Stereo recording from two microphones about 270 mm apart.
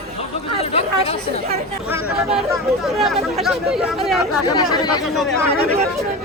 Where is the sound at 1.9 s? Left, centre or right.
Centre.